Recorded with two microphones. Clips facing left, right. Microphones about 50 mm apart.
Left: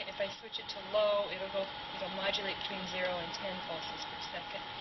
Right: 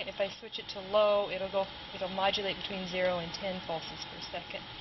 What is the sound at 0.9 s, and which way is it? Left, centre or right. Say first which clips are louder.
Speech: right 4 dB; right.